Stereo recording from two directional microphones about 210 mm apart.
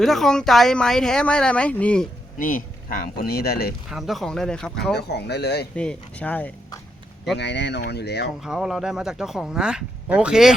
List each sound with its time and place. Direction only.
0.0 s speech: centre (ahead or behind)
2.4 s speech: 40° left (ahead or behind)
3.8 s speech: centre (ahead or behind)
4.9 s speech: 50° left (ahead or behind)
5.7 s speech: 5° left (ahead or behind)
7.3 s speech: 55° left (ahead or behind)
8.4 s speech: centre (ahead or behind)